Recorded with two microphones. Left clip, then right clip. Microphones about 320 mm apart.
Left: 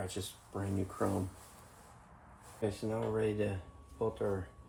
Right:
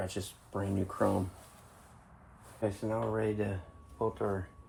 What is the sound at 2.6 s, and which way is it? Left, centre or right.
Speech, centre.